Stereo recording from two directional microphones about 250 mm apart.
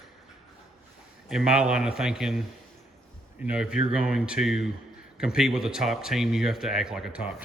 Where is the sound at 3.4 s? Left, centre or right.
Centre.